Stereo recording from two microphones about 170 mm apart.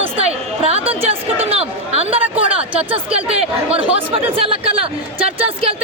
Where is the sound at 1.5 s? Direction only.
35° right (ahead or behind).